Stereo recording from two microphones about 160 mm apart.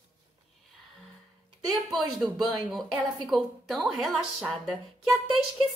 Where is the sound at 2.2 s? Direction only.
Centre (ahead or behind).